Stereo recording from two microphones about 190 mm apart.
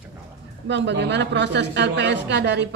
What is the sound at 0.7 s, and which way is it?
A woman's voice, 65° right (ahead or behind).